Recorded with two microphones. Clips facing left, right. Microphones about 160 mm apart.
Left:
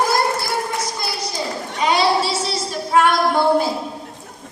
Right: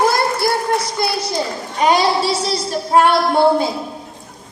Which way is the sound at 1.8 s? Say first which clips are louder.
Right 3 dB; 45° right (ahead or behind).